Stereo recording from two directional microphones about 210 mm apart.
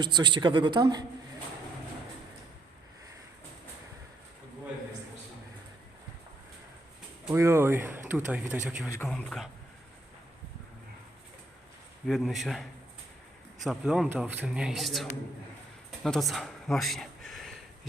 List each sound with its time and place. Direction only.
0.0 s speech: 20° right (ahead or behind)
7.3 s a man's voice: 10° right (ahead or behind)
12.0 s a man's voice: centre (ahead or behind)
16.0 s speech: centre (ahead or behind)